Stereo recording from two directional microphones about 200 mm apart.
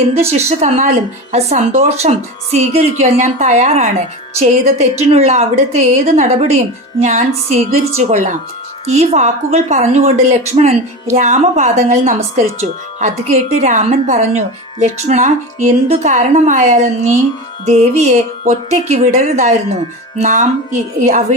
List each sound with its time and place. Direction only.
0.1 s a woman's voice: 30° right (ahead or behind)